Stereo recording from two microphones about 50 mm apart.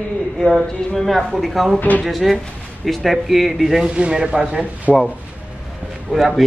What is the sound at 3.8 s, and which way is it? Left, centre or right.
Speech, right.